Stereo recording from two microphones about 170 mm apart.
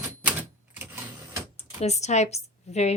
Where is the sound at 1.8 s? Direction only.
40° left (ahead or behind).